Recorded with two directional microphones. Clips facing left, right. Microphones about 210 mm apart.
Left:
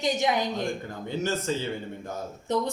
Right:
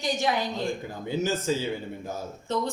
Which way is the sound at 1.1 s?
5° right (ahead or behind).